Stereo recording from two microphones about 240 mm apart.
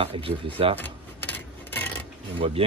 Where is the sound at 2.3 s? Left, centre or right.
Right.